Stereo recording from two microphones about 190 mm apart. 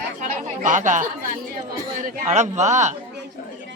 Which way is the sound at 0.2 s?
40° right (ahead or behind).